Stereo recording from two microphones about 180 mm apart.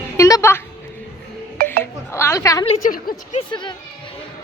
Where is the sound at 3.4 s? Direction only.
25° left (ahead or behind).